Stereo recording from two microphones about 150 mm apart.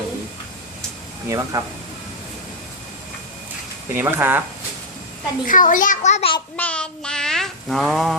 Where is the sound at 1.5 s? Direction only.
20° right (ahead or behind).